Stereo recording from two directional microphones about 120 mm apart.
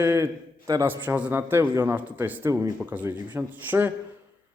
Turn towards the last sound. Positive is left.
turn(degrees=-15)  # may be behind; listen again after turning